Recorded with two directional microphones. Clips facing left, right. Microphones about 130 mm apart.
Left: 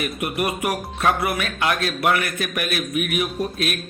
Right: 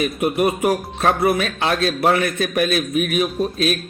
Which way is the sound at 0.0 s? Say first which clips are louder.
Right 6 dB; 25° right (ahead or behind).